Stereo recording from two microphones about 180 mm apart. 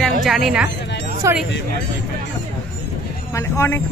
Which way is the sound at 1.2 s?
15° right (ahead or behind).